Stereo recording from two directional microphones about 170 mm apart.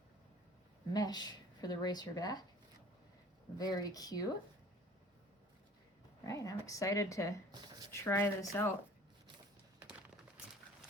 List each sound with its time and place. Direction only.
0.9 s speech: 25° left (ahead or behind)
3.6 s speech: 20° left (ahead or behind)
6.2 s speech: 20° left (ahead or behind)